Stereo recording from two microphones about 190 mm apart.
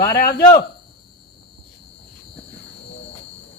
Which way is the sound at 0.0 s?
55° left (ahead or behind).